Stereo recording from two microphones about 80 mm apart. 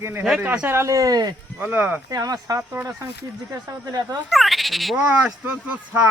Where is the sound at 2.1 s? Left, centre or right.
Right.